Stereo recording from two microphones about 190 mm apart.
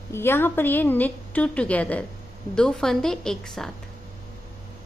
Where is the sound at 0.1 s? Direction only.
10° left (ahead or behind).